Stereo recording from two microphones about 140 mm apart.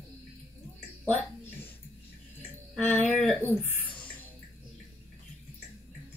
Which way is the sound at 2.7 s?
10° left (ahead or behind).